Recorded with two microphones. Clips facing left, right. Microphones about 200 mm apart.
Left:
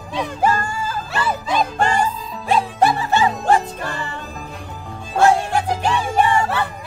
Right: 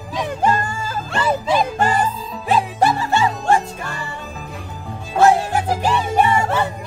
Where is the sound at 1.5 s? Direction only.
5° right (ahead or behind).